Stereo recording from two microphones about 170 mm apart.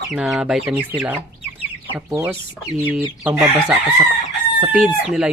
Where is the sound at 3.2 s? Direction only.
5° right (ahead or behind).